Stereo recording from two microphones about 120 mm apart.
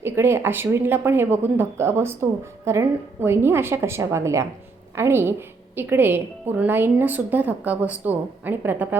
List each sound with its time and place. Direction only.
0.0 s a woman's voice: 20° right (ahead or behind)